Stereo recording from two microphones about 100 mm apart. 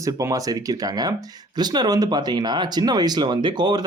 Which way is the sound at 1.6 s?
40° right (ahead or behind).